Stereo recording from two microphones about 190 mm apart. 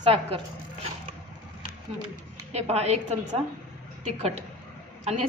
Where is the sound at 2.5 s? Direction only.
35° right (ahead or behind).